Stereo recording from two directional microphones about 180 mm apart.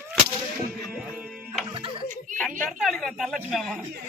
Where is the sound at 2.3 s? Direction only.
45° right (ahead or behind).